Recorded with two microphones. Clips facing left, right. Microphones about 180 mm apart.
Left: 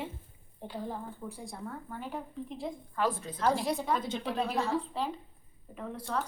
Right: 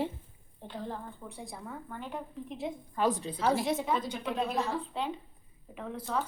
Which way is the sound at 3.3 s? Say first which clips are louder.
Right 1 dB; 5° right (ahead or behind).